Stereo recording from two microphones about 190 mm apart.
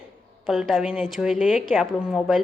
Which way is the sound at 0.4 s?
Centre (ahead or behind).